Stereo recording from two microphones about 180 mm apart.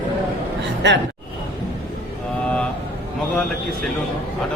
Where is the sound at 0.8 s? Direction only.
80° right.